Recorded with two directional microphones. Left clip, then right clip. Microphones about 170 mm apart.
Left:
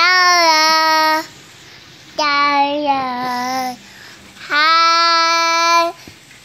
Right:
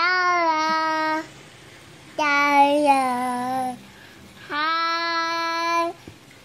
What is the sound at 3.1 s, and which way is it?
Child singing, 5° left (ahead or behind).